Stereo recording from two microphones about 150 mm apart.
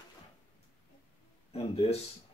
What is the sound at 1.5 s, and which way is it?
Speech, 40° left (ahead or behind).